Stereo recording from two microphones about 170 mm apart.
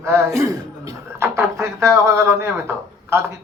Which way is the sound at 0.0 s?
15° right (ahead or behind).